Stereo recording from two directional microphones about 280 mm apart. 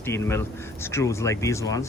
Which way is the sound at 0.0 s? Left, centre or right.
Centre.